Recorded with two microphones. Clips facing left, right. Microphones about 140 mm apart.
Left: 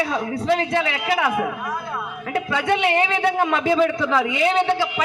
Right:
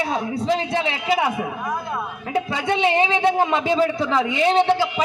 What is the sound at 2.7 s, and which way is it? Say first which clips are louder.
A man's voice: right 1 dB; 20° right (ahead or behind).